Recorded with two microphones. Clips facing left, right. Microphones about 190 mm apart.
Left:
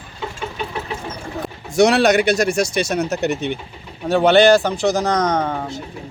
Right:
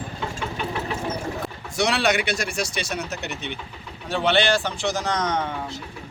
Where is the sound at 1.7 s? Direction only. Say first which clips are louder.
Left 9 dB; 45° left (ahead or behind).